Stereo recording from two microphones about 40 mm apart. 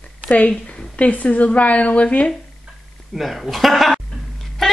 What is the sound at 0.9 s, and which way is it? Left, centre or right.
A woman's voice, left.